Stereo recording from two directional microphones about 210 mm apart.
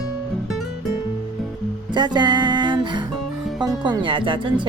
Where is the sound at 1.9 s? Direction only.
20° right (ahead or behind).